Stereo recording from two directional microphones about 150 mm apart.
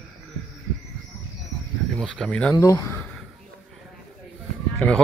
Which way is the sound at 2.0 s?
5° left (ahead or behind).